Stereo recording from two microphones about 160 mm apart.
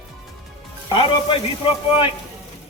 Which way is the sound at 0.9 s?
35° left (ahead or behind).